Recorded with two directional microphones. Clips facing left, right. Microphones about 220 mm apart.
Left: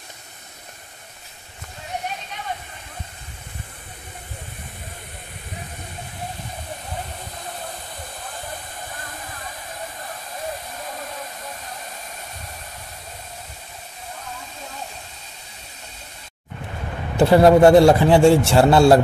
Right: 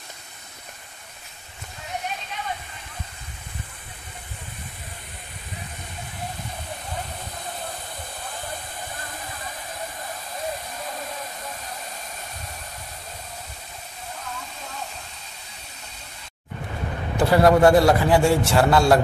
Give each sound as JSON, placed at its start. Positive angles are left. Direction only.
{"t": 17.2, "sound": "a man's voice", "side_deg": 25}